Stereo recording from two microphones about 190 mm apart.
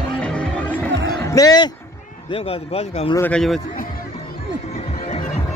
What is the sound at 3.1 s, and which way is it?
Speech, 10° left (ahead or behind).